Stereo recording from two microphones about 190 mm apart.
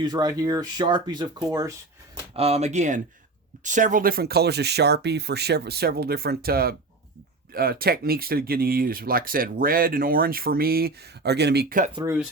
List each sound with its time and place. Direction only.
0.0 s speech: 20° right (ahead or behind)
2.3 s speech: 35° right (ahead or behind); by 11.8 s 60° right (ahead or behind)
12.0 s speech: 5° right (ahead or behind)